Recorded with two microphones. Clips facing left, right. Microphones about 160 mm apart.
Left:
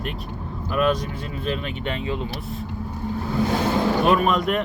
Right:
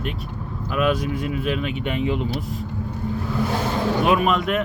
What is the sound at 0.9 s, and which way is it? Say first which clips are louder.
Speech: right 2 dB; 10° right (ahead or behind).